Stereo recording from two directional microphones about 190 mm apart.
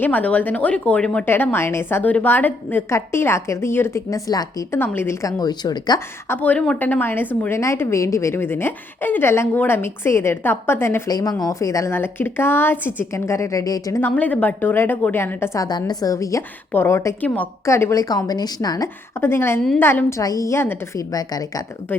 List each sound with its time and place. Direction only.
0.0 s a woman's voice: 10° left (ahead or behind)
19.6 s a woman's voice: centre (ahead or behind)
19.9 s a woman's voice: 15° left (ahead or behind)